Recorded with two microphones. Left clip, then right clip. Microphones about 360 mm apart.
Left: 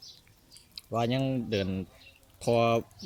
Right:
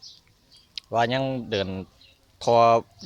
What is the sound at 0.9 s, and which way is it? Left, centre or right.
Speech, centre.